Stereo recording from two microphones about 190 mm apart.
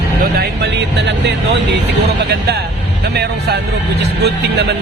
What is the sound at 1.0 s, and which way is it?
Speech, 65° right (ahead or behind).